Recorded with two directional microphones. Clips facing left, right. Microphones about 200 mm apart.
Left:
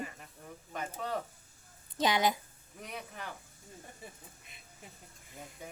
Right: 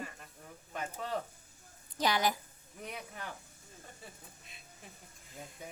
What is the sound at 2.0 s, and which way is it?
Speech, 20° left (ahead or behind).